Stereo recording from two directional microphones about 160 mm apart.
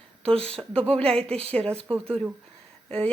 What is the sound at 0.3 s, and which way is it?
Speech, 40° right (ahead or behind).